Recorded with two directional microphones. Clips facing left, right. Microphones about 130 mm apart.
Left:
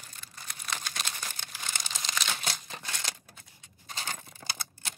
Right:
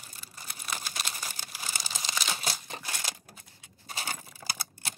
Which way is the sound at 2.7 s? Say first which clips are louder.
Right 1 dB; 10° right (ahead or behind).